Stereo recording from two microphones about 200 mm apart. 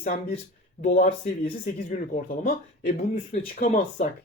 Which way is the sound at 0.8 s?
35° left (ahead or behind).